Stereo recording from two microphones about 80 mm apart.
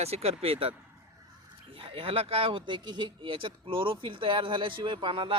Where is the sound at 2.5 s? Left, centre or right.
Right.